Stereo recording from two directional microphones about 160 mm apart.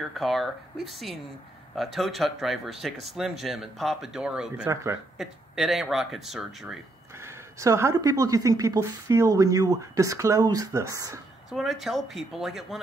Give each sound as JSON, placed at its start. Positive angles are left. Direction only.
{"t": 0.0, "sound": "speech", "side_deg": 0}
{"t": 7.2, "sound": "speech", "side_deg": -20}
{"t": 11.5, "sound": "speech", "side_deg": 0}